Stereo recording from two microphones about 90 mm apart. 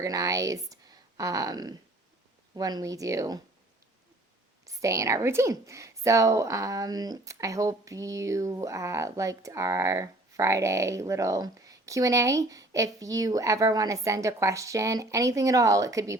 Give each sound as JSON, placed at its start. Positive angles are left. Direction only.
{"t": 0.0, "sound": "speech", "side_deg": -40}
{"t": 4.6, "sound": "speech", "side_deg": -35}